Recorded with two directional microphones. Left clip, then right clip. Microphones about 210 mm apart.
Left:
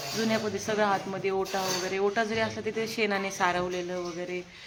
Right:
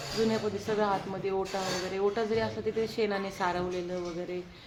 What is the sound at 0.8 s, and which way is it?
Speech, 20° left (ahead or behind).